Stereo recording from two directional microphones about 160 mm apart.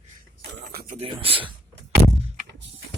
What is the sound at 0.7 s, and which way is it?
Speech, 75° right (ahead or behind).